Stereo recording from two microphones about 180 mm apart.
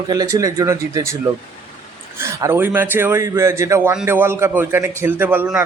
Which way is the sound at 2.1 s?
15° right (ahead or behind).